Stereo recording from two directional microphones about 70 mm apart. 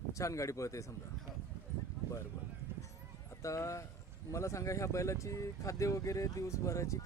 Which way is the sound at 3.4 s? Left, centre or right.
Left.